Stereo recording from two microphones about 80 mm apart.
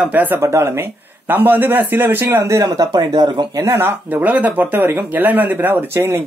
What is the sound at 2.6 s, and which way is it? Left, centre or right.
Speech, right.